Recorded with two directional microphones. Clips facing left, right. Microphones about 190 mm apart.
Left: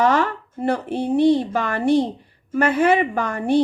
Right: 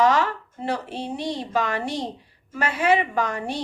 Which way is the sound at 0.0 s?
55° left (ahead or behind).